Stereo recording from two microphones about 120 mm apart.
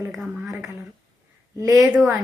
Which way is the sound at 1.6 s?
25° right (ahead or behind).